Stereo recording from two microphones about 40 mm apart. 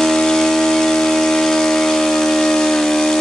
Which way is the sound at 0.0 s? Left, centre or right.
Centre.